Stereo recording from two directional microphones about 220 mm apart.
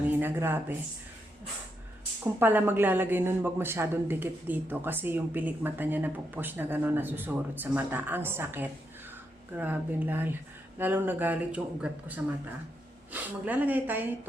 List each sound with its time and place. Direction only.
0.2 s speech: 10° right (ahead or behind)
2.2 s speech: 10° right (ahead or behind)